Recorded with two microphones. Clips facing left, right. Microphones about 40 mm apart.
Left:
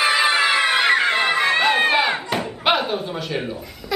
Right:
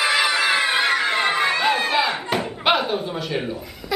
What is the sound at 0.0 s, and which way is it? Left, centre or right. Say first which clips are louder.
Music: left 2 dB; left.